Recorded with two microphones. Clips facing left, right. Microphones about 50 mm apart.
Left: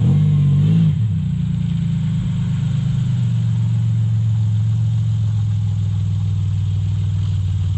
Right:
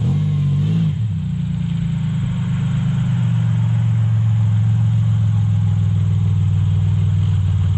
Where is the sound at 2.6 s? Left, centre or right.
Right.